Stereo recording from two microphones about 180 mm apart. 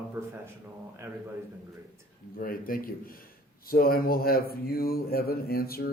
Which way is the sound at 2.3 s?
50° left (ahead or behind).